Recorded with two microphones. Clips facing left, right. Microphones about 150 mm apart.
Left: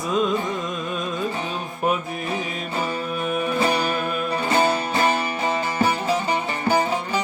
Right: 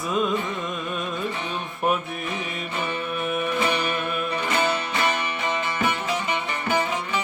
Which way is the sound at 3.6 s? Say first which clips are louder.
Left 3 dB; 35° left (ahead or behind).